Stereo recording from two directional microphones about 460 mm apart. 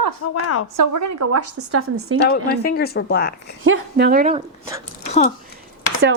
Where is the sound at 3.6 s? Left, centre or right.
Right.